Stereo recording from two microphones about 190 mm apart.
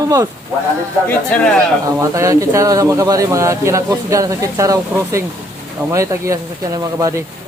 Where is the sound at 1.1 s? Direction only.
5° left (ahead or behind).